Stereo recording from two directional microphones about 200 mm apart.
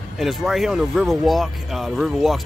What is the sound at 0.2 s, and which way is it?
Speech, centre (ahead or behind).